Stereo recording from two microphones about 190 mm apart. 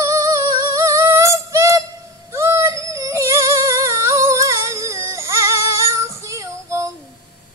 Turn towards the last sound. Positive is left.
turn(degrees=-15)  # may be behind; listen again after turning